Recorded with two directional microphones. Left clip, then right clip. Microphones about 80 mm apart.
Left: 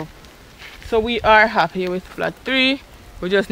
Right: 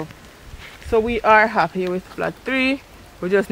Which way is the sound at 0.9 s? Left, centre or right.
Left.